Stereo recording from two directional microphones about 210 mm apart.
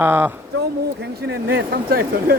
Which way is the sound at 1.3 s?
50° right (ahead or behind).